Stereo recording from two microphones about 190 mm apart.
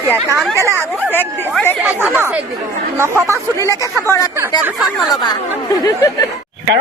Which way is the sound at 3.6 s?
15° left (ahead or behind).